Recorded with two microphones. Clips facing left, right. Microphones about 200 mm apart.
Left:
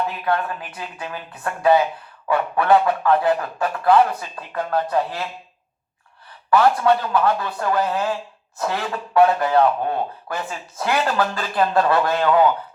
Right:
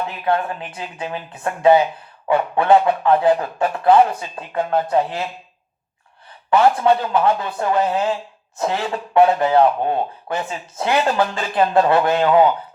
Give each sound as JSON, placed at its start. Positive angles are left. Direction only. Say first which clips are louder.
{"t": 0.3, "sound": "speech", "louder": "right 6 dB", "side_deg": -25}
{"t": 6.5, "sound": "speech", "louder": "right 1 dB", "side_deg": -25}